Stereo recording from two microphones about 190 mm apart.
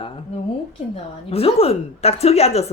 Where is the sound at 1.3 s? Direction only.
30° left (ahead or behind).